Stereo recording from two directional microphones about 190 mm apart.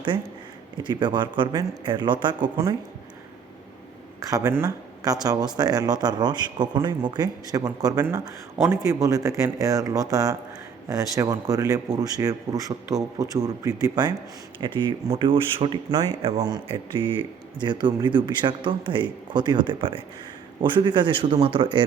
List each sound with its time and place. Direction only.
0.8 s speech: 25° right (ahead or behind)
4.3 s speech: 15° right (ahead or behind)